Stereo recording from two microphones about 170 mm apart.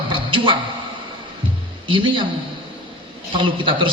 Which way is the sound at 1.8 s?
30° right (ahead or behind).